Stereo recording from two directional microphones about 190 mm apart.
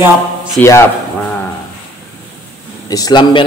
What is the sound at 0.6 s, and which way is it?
Speech, 15° left (ahead or behind).